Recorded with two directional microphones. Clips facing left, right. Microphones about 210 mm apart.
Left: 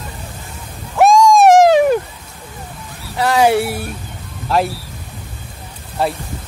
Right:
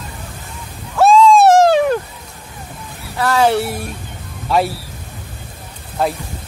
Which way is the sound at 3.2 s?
15° left (ahead or behind).